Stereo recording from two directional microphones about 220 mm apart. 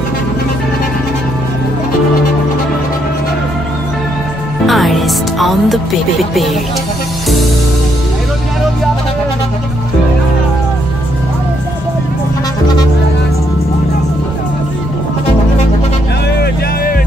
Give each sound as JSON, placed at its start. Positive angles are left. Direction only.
{"t": 4.6, "sound": "music", "side_deg": 0}
{"t": 16.3, "sound": "music", "side_deg": 45}